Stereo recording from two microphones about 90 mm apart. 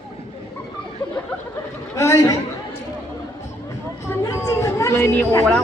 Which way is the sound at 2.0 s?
35° left (ahead or behind).